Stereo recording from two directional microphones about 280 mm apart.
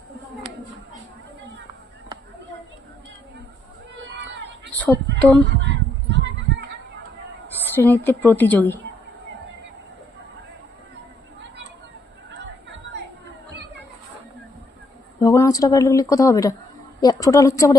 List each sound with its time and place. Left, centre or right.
4.1 s a sound: right
5.5 s honk: right
7.8 s a woman's voice: centre
12.9 s chatter: right
15.2 s a woman's voice: centre